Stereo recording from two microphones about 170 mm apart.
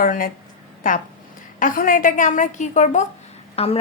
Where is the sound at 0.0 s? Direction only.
55° left (ahead or behind).